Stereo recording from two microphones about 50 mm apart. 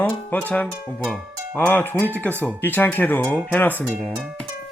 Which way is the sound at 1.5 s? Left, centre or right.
Left.